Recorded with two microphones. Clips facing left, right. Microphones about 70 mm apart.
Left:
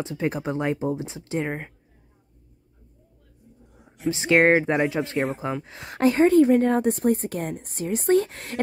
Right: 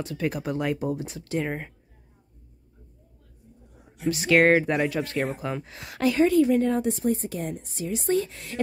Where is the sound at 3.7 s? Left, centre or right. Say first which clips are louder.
Left 1 dB; centre.